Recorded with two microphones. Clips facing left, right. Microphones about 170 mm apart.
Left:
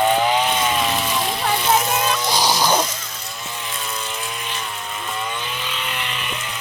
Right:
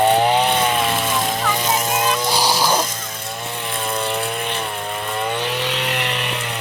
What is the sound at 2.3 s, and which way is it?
Music, 10° right (ahead or behind).